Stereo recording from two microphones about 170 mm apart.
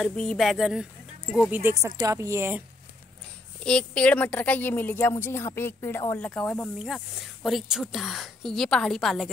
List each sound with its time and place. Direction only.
0.0 s a woman's voice: 5° left (ahead or behind)
1.5 s a woman's voice: 15° right (ahead or behind)
3.6 s a woman's voice: 5° left (ahead or behind)